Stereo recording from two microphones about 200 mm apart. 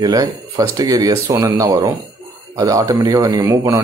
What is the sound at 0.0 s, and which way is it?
Speech, 20° right (ahead or behind).